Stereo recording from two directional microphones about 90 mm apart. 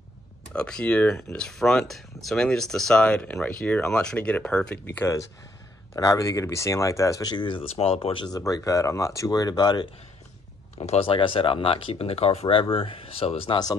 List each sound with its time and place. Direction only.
0.5 s speech: 10° left (ahead or behind)
4.8 s speech: 20° left (ahead or behind)
5.9 s speech: 35° left (ahead or behind); by 8.3 s 80° left
8.3 s speech: 45° left (ahead or behind)
10.8 s speech: 85° left